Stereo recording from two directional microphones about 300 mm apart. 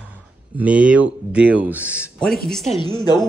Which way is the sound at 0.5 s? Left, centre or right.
Centre.